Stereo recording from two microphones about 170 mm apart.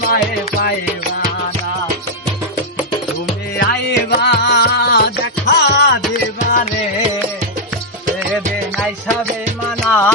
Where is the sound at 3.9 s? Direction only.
80° left.